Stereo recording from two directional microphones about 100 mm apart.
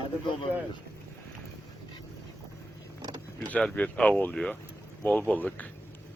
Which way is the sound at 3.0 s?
40° right (ahead or behind).